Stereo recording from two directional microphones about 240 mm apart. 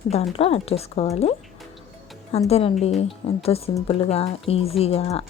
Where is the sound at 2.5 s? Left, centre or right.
Left.